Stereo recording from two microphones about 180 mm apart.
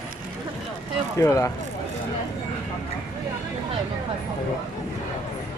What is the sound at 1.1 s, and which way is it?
Speech, 15° left (ahead or behind).